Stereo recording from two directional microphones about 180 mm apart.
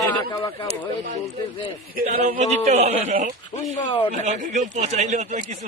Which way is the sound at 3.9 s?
25° left (ahead or behind).